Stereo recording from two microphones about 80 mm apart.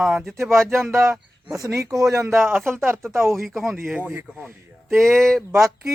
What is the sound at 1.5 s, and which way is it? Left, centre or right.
Speech, right.